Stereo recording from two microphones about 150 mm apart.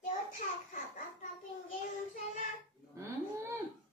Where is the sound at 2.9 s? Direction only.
20° right (ahead or behind).